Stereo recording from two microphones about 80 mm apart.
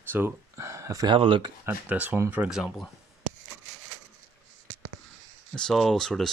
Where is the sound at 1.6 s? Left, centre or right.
Right.